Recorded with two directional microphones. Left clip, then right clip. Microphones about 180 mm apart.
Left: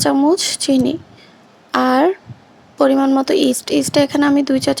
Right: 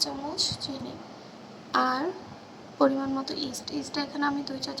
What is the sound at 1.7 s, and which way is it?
Speech, 40° left (ahead or behind).